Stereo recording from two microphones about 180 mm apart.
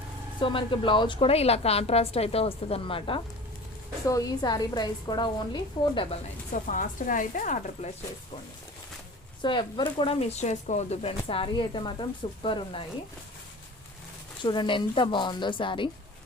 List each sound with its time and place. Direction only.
0.3 s a woman's voice: 25° left (ahead or behind)
4.1 s speech: 20° left (ahead or behind)
6.5 s speech: 45° left (ahead or behind)
9.4 s speech: 25° left (ahead or behind)
14.4 s speech: 25° left (ahead or behind)